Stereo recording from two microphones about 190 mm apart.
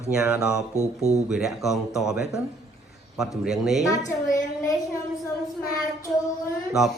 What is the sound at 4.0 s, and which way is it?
Speech, 40° left (ahead or behind).